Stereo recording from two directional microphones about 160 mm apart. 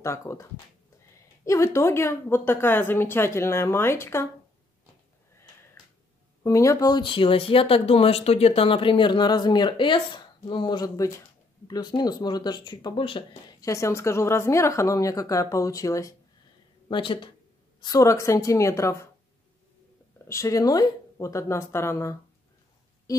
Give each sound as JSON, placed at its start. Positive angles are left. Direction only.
{"t": 0.0, "sound": "speech", "side_deg": 20}
{"t": 6.4, "sound": "speech", "side_deg": 20}
{"t": 16.9, "sound": "speech", "side_deg": 30}
{"t": 20.2, "sound": "speech", "side_deg": 20}
{"t": 23.1, "sound": "a sound", "side_deg": 20}